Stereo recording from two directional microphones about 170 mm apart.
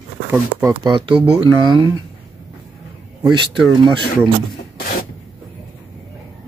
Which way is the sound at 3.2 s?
25° right (ahead or behind).